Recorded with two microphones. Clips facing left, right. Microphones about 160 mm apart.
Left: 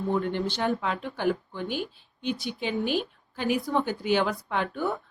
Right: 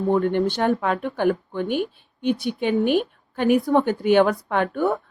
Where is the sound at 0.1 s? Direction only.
55° right (ahead or behind).